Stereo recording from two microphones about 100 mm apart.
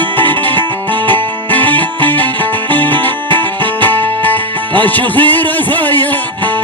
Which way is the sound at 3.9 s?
20° left (ahead or behind).